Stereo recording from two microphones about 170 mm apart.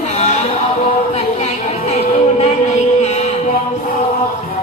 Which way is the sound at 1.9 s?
40° left (ahead or behind).